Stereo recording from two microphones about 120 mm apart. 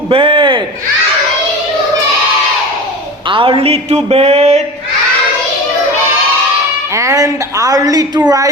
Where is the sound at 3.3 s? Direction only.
45° right (ahead or behind); by 4.6 s 65° right (ahead or behind).